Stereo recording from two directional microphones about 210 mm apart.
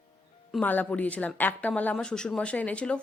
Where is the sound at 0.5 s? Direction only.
10° left (ahead or behind).